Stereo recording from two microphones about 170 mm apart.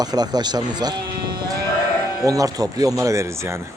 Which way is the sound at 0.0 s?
25° right (ahead or behind).